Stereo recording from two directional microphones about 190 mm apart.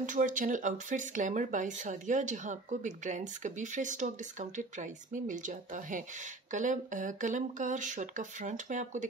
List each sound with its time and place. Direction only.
0.0 s speech: 45° right (ahead or behind)